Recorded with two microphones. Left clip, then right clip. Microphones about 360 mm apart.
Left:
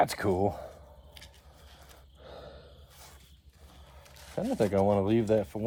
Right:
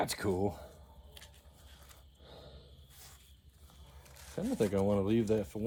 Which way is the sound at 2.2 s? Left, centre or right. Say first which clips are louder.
Left 8 dB; left.